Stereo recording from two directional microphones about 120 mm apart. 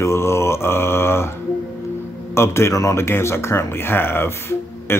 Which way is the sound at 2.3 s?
20° left (ahead or behind).